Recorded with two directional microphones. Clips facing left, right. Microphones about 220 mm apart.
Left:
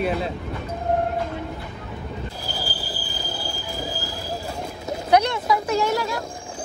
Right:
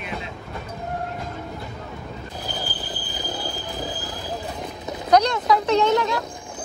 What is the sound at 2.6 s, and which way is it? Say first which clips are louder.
Train wheels squealing: even; 20° right (ahead or behind).